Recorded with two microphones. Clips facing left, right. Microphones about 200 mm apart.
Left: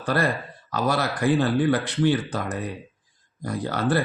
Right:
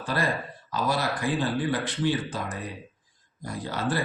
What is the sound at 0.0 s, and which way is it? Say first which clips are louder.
Speech: left 4 dB; 65° left (ahead or behind).